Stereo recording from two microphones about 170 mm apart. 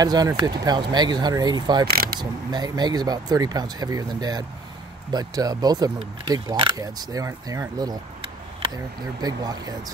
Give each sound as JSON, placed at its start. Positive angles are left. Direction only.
{"t": 0.0, "sound": "speech", "side_deg": -20}
{"t": 1.9, "sound": "speech", "side_deg": -60}
{"t": 2.1, "sound": "speech", "side_deg": -25}
{"t": 9.2, "sound": "speech", "side_deg": -25}